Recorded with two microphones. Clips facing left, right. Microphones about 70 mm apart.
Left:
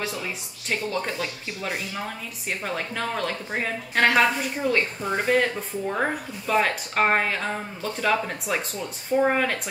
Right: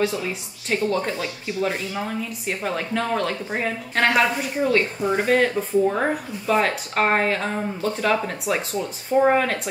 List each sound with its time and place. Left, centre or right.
0.7 s speech: centre